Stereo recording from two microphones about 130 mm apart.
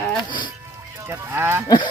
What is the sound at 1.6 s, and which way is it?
Livestock, 35° left (ahead or behind).